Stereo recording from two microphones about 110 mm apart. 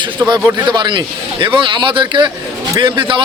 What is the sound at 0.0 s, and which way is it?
Speech, 40° right (ahead or behind).